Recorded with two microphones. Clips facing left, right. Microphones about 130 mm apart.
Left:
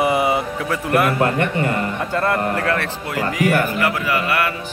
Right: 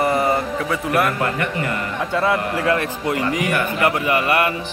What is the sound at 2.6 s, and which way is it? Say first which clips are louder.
Speech: right 2 dB; 15° right (ahead or behind).